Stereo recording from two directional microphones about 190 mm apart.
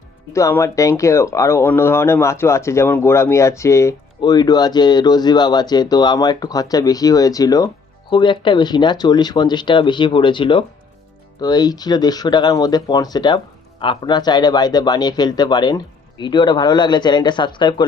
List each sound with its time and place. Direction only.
0.3 s speech: 15° left (ahead or behind)